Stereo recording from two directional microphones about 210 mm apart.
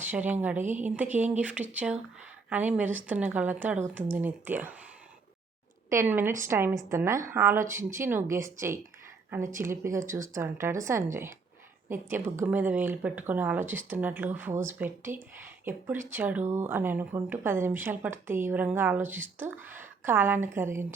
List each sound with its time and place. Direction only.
0.0 s speech: 10° right (ahead or behind)
0.6 s a woman's voice: 35° right (ahead or behind)
1.1 s speech: 5° right (ahead or behind)
5.9 s speech: 10° right (ahead or behind)